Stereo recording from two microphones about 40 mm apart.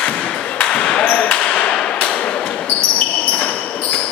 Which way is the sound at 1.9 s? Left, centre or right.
Left.